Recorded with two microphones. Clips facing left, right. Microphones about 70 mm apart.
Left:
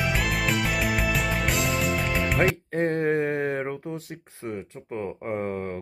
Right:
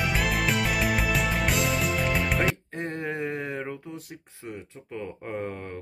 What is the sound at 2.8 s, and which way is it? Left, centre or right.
Mantra, left.